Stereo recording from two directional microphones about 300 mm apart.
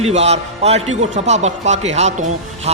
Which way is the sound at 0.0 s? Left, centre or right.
Right.